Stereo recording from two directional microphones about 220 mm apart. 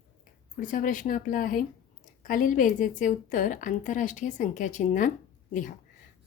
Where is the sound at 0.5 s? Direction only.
35° left (ahead or behind).